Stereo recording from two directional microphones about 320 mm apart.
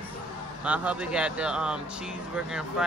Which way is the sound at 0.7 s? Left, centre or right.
Centre.